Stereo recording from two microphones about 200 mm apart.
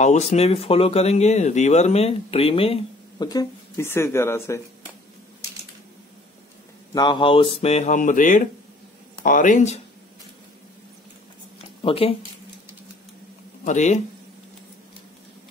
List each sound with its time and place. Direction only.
0.0 s speech: 35° left (ahead or behind); by 4.6 s 15° left (ahead or behind)
6.9 s speech: 20° left (ahead or behind); by 9.8 s 40° left (ahead or behind)
11.5 s a sound: 30° left (ahead or behind)
13.7 s speech: 35° left (ahead or behind)